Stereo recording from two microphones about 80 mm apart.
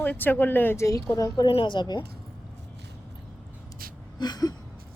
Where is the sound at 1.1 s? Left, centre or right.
Left.